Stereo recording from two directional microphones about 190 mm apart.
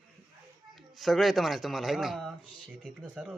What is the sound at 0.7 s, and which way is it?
Speech, centre (ahead or behind).